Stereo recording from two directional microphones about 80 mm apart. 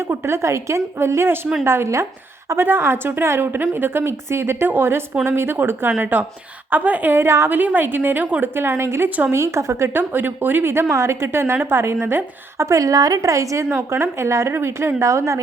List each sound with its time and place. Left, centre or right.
0.0 s a woman's voice: right
7.6 s a woman's voice: right
9.0 s a woman's voice: centre
9.3 s speech: right
13.7 s speech: right